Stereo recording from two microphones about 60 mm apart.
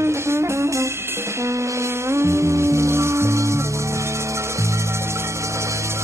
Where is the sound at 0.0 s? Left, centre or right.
Right.